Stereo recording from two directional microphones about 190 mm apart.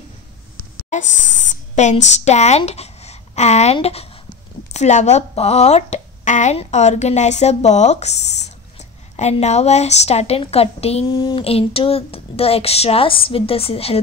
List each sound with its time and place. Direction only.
1.3 s speech: 40° left (ahead or behind)